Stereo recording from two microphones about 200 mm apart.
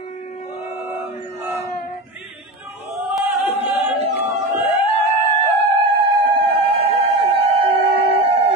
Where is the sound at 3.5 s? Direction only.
30° right (ahead or behind).